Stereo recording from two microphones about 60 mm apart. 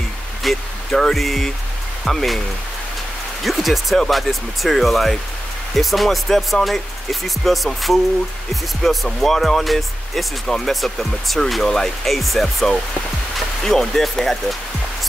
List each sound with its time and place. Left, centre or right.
0.4 s speech: centre
3.4 s speech: centre